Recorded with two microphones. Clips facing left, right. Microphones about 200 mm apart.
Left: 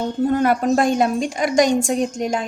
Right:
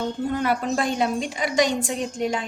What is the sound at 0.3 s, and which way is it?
A woman's voice, 45° left (ahead or behind).